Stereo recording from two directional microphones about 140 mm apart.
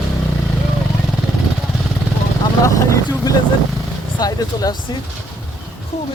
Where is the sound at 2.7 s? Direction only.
20° left (ahead or behind).